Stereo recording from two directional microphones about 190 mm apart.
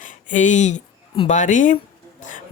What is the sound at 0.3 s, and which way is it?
Speech, 40° left (ahead or behind).